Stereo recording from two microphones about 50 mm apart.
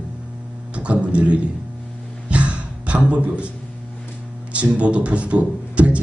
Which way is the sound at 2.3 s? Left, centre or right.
Right.